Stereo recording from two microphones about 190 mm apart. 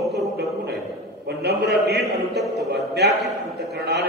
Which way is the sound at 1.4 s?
60° right (ahead or behind).